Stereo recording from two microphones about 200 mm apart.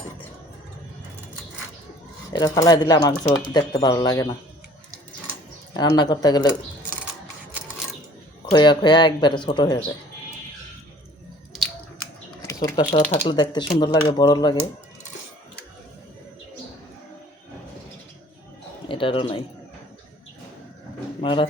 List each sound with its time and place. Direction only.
2.3 s speech: 20° left (ahead or behind)
5.7 s speech: 20° left (ahead or behind)
8.5 s speech: 25° left (ahead or behind)
12.8 s speech: 35° left (ahead or behind)
13.2 s speech: 20° left (ahead or behind)
18.9 s speech: 25° left (ahead or behind)
21.2 s speech: 25° left (ahead or behind)